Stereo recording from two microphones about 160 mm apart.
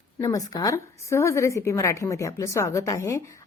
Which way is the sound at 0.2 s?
20° left (ahead or behind).